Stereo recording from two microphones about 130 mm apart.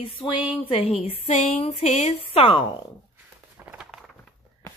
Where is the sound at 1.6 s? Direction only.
55° left (ahead or behind).